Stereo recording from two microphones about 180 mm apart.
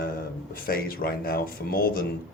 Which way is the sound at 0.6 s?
55° left (ahead or behind).